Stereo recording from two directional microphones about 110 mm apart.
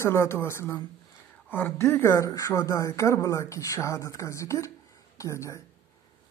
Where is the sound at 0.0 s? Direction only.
25° left (ahead or behind).